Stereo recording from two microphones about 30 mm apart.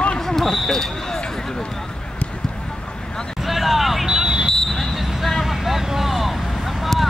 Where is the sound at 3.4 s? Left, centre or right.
Centre.